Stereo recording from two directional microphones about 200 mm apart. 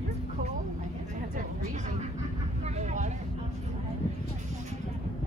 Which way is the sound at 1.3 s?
40° right (ahead or behind).